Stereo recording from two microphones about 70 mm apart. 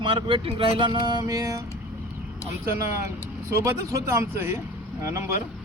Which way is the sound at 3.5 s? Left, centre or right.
Right.